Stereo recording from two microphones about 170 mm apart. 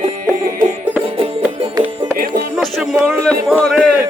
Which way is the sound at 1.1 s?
30° right (ahead or behind).